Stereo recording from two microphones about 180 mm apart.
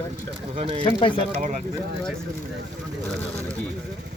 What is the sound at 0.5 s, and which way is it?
Speech, 30° right (ahead or behind).